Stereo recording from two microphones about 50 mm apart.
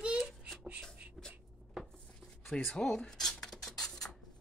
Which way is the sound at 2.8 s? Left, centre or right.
Centre.